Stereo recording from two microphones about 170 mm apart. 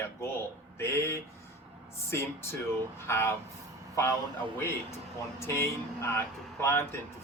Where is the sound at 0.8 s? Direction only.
15° left (ahead or behind).